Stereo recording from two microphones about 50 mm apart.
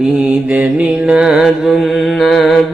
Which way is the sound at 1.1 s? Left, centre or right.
Centre.